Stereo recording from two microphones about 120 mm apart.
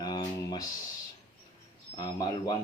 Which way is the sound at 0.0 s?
35° left (ahead or behind).